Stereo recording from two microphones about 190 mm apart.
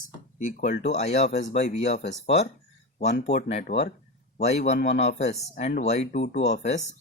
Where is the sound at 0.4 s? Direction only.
45° left (ahead or behind).